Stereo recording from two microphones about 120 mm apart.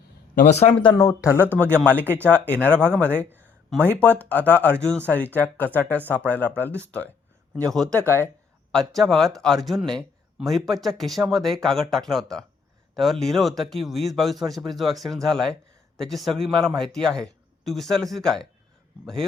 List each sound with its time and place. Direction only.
0.4 s speech: 65° left (ahead or behind)
0.7 s speech: 40° left (ahead or behind)
1.0 s speech: 25° left (ahead or behind); by 7.9 s 5° left (ahead or behind)
7.9 s speech: 20° left (ahead or behind)
8.7 s speech: centre (ahead or behind)